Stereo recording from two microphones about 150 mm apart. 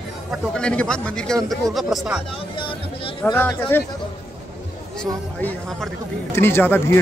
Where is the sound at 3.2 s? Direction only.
15° left (ahead or behind).